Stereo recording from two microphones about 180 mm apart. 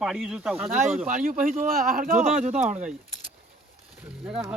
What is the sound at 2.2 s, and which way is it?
Speech, 5° right (ahead or behind).